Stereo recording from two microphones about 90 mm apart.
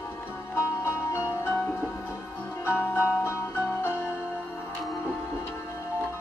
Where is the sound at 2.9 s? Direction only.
20° left (ahead or behind).